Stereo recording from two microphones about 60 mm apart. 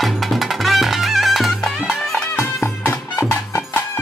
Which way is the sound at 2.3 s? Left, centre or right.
Left.